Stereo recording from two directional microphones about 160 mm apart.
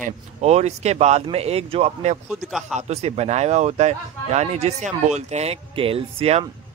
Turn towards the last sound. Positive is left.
turn(degrees=-35)  # may be behind; listen again after turning